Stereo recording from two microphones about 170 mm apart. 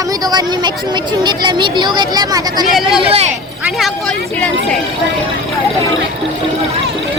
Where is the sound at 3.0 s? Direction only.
35° right (ahead or behind).